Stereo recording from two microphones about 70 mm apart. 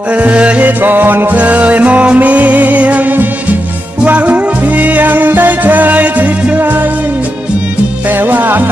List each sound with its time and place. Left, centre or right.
0.1 s music: centre
8.1 s music: right